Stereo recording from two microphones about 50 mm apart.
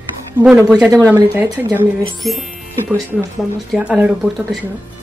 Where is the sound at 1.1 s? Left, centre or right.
Right.